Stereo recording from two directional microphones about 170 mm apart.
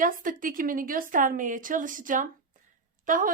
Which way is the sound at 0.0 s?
55° right (ahead or behind).